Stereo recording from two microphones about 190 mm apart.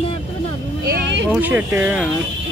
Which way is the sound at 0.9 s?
70° right (ahead or behind).